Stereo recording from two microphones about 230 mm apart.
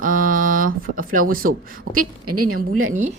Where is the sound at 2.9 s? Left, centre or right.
Right.